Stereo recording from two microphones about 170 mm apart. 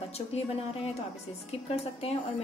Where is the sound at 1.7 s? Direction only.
35° left (ahead or behind).